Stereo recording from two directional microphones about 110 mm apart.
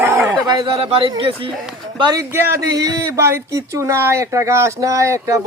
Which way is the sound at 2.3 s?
20° right (ahead or behind).